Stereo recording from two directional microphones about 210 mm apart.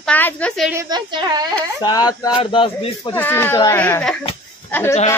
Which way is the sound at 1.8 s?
20° left (ahead or behind).